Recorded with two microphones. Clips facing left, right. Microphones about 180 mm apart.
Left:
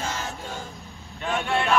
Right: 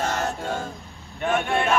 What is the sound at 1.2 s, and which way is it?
Speech, 55° right (ahead or behind).